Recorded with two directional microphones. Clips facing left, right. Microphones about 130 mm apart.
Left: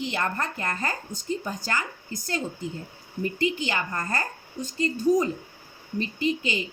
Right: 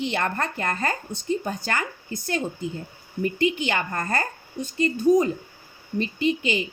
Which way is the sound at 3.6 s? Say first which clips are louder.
Right 3 dB; 65° right (ahead or behind).